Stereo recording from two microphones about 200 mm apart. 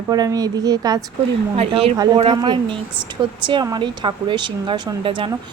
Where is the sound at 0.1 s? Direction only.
20° right (ahead or behind).